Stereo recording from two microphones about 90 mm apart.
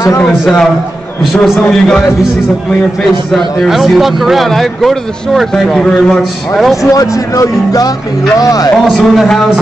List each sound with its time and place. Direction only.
1.2 s speech: centre (ahead or behind)
3.3 s speech: centre (ahead or behind)
6.8 s speech: 40° left (ahead or behind)
8.8 s speech: centre (ahead or behind)